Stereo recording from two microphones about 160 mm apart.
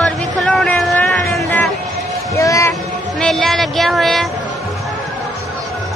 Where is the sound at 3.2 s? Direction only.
Centre (ahead or behind).